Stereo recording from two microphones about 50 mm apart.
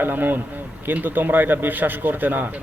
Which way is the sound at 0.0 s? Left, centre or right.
Right.